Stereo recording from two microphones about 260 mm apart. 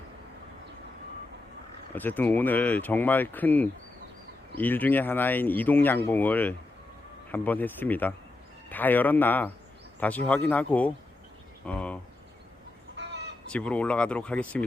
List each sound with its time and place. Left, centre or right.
2.0 s speech: centre
11.6 s cricket: centre
13.0 s fowl: right
13.5 s speech: centre